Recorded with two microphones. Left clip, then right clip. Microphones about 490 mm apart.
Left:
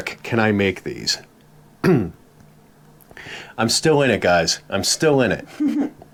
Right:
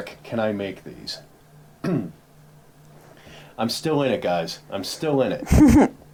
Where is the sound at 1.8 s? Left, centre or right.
Left.